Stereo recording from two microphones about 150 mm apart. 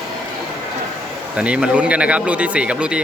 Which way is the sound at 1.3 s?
5° right (ahead or behind).